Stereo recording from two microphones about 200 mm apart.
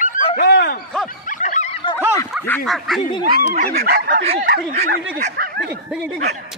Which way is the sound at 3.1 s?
25° left (ahead or behind).